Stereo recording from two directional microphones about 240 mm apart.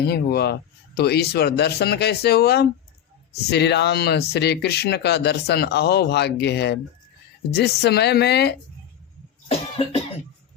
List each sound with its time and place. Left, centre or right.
0.1 s speech: left
9.5 s cough: left